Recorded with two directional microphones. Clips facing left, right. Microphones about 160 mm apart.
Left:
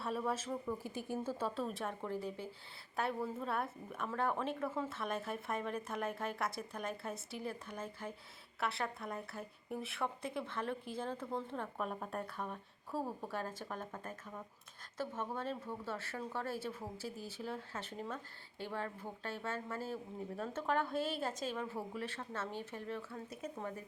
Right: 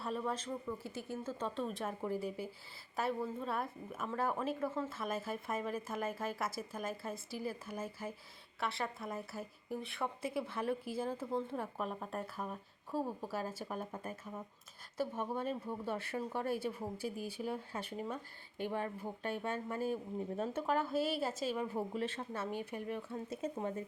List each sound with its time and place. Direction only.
0.0 s a woman's voice: 5° left (ahead or behind); by 23.8 s 25° right (ahead or behind)